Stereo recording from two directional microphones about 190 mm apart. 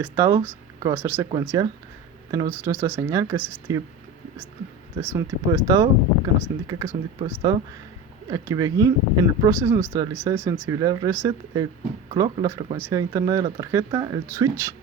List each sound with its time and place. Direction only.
0.0 s speech: 15° right (ahead or behind)
4.9 s speech: 15° right (ahead or behind)